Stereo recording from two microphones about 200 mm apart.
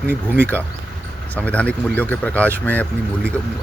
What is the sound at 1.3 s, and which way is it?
Speech, 5° left (ahead or behind).